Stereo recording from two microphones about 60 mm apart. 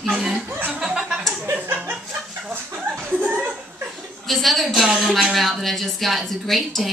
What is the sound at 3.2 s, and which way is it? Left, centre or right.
Chuckle, right.